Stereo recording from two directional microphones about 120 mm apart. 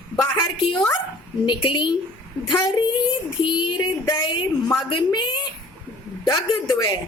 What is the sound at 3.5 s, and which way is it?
Speech, 40° left (ahead or behind).